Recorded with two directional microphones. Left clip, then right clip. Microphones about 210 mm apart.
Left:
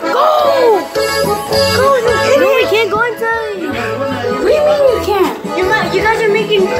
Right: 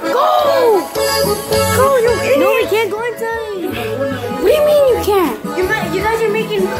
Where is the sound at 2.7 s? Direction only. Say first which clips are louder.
Left 4 dB; 20° right (ahead or behind).